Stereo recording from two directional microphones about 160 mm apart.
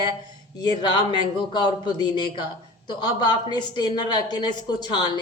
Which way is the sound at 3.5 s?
25° left (ahead or behind).